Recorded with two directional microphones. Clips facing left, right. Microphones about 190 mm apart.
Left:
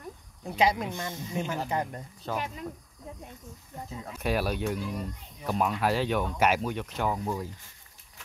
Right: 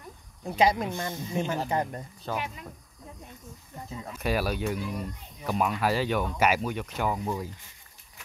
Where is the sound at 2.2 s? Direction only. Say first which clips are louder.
Even; centre (ahead or behind).